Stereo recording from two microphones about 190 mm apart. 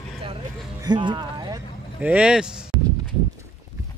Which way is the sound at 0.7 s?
25° right (ahead or behind).